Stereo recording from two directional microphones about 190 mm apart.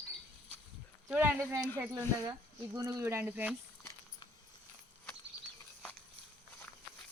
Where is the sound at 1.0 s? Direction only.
10° right (ahead or behind).